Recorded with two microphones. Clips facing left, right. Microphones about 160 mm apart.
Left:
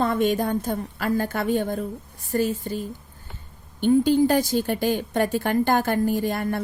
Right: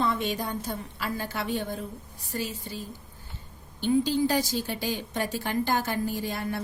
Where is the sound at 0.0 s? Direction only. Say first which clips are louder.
Left 7 dB; 50° left (ahead or behind).